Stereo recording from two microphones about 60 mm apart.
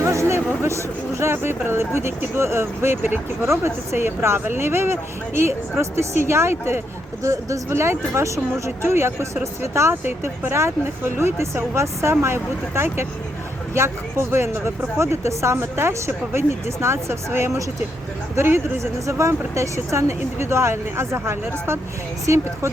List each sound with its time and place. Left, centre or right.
0.0 s speech: right
7.2 s speech: right
9.9 s speech: right